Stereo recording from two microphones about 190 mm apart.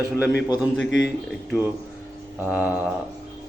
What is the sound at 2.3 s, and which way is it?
Speech, 10° right (ahead or behind).